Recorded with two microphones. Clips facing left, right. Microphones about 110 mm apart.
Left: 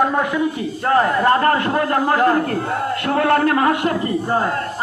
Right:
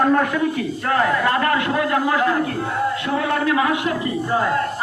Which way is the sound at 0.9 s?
35° left (ahead or behind).